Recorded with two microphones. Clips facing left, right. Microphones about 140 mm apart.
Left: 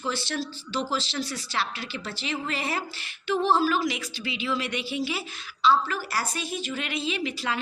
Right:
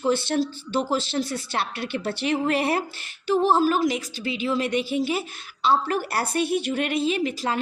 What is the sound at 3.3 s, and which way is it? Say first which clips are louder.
A woman's voice: right 3 dB; 45° right (ahead or behind).